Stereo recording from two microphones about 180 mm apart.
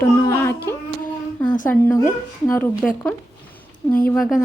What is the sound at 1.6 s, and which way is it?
A woman's voice, 10° left (ahead or behind).